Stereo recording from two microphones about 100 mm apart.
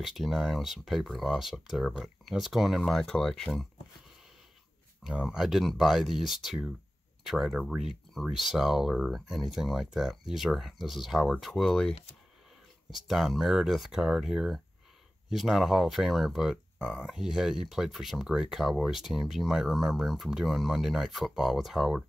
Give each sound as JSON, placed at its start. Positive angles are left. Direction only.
{"t": 0.0, "sound": "speech", "side_deg": 0}
{"t": 5.2, "sound": "speech", "side_deg": -5}
{"t": 12.9, "sound": "speech", "side_deg": 0}